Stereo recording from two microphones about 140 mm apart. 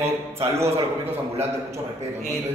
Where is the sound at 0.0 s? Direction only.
20° right (ahead or behind).